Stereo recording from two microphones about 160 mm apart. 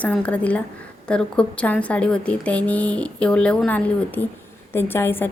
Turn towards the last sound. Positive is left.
turn(degrees=15)  # may be behind; listen again after turning